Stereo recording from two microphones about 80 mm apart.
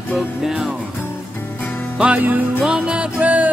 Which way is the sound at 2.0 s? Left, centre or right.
Centre.